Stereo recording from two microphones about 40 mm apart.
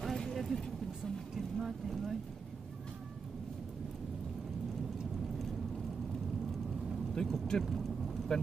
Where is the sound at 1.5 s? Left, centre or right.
Centre.